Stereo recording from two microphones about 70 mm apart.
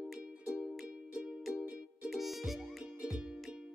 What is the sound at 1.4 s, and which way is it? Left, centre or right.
Music, centre.